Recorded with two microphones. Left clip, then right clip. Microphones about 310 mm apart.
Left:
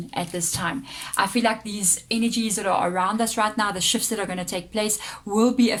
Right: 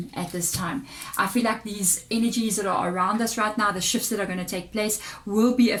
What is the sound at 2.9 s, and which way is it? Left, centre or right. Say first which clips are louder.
Speech: left 1 dB; left.